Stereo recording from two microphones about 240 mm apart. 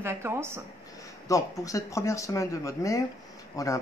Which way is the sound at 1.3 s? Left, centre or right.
Centre.